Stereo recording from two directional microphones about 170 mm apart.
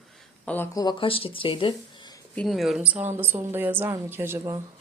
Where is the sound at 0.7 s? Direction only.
25° left (ahead or behind).